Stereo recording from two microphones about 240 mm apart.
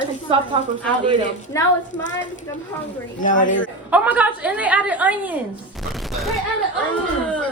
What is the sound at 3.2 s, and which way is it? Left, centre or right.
Speech, left.